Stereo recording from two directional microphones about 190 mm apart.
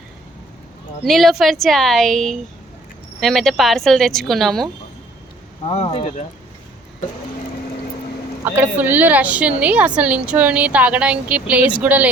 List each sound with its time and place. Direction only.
1.0 s a woman's voice: centre (ahead or behind)
5.6 s speech: 30° left (ahead or behind)
8.5 s a woman's voice: 10° right (ahead or behind)